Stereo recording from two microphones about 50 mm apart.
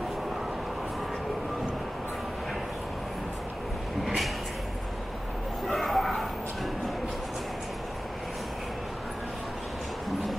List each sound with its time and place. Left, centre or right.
5.7 s bow-wow: centre